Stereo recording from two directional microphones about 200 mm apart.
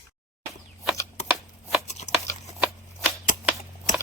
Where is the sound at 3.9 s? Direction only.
40° left (ahead or behind).